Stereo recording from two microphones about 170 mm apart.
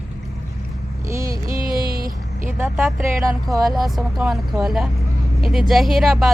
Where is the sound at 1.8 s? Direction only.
60° right (ahead or behind).